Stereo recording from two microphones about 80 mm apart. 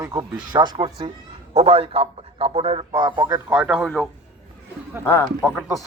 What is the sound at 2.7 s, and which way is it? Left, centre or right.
Speech, right.